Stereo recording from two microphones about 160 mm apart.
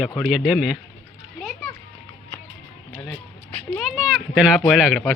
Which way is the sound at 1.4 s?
Centre (ahead or behind).